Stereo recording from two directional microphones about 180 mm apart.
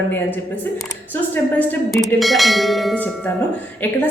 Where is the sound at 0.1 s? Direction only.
10° left (ahead or behind).